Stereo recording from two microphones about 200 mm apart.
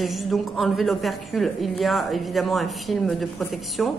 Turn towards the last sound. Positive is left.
turn(degrees=0)  # may be behind; listen again after turning